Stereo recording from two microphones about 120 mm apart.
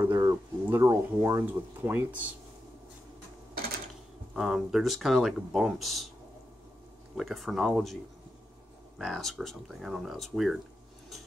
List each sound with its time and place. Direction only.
0.0 s a sound: 25° right (ahead or behind)
1.4 s speech: 15° right (ahead or behind)
4.4 s speech: 5° right (ahead or behind)
7.2 s speech: centre (ahead or behind)